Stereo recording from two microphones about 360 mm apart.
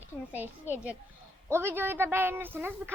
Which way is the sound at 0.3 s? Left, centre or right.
Centre.